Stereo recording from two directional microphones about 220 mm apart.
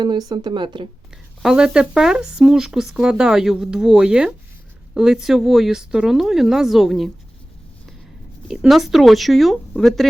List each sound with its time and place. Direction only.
0.0 s speech: 20° right (ahead or behind)
1.4 s speech: centre (ahead or behind)
8.4 s speech: centre (ahead or behind)